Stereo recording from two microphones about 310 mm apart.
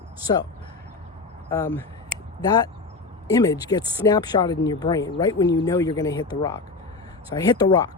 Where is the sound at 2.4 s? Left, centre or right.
Centre.